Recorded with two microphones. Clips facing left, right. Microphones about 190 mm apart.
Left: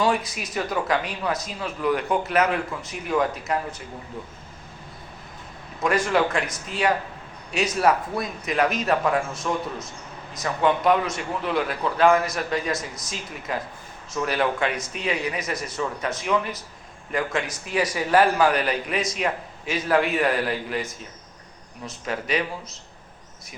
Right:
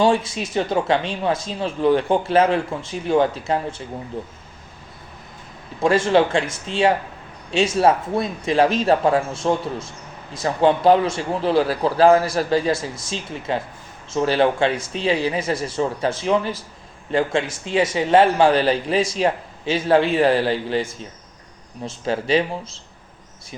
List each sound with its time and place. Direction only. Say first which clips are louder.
0.0 s a man's voice: right 5 dB; 25° right (ahead or behind)
5.8 s a man's voice: right 5 dB; 30° right (ahead or behind)